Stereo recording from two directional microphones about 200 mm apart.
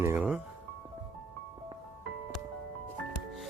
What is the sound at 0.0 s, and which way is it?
Music, 10° right (ahead or behind).